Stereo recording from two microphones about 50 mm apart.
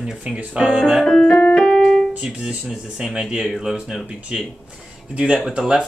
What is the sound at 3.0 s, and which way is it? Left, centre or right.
Speech, centre.